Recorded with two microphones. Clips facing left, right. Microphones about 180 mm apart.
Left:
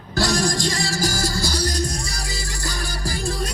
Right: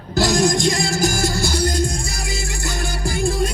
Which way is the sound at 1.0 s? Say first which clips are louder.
Right 3 dB; 25° right (ahead or behind).